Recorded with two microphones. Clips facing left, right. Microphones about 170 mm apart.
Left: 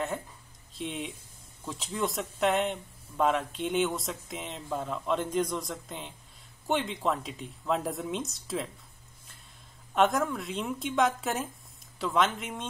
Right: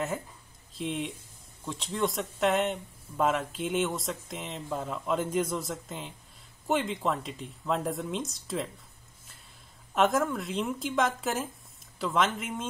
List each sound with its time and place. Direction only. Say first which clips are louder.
0.7 s speech: right 3 dB; centre (ahead or behind)
9.9 s speech: even; centre (ahead or behind)